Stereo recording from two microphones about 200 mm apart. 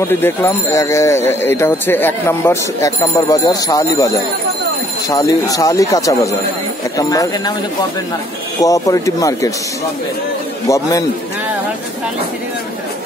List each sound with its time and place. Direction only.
0.2 s speech: 15° left (ahead or behind)
8.5 s speech: 15° left (ahead or behind)
10.7 s speech: 15° left (ahead or behind)